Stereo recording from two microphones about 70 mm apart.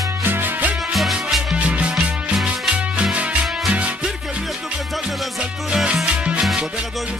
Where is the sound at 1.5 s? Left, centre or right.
Centre.